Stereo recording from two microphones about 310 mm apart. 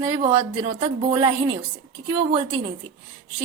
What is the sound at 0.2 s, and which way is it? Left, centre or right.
A woman's voice, centre.